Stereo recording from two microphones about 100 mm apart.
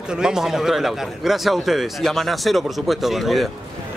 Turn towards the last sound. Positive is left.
turn(degrees=0)  # may be behind; listen again after turning